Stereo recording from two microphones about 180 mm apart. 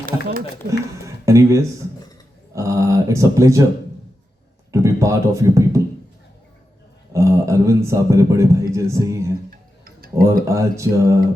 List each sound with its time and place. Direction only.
0.0 s speech: 50° right (ahead or behind)
0.7 s speech: 15° right (ahead or behind)
2.6 s speech: 15° right (ahead or behind)
4.7 s speech: 15° right (ahead or behind)
7.1 s speech: 15° right (ahead or behind)
9.5 s tick-tock: 55° right (ahead or behind)
10.5 s speech: 15° right (ahead or behind)